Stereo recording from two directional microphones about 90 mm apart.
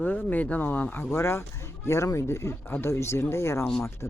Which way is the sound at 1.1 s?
30° left (ahead or behind).